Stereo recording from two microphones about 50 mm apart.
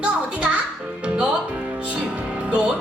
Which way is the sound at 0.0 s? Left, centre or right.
Right.